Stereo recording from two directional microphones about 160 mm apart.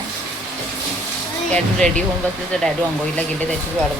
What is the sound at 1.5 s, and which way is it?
Speech, 5° left (ahead or behind).